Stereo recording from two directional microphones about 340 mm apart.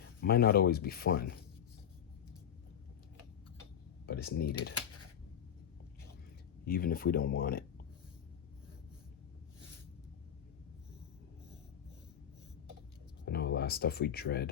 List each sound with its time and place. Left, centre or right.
0.2 s speech: left
4.0 s speech: left
6.7 s speech: left
13.2 s speech: left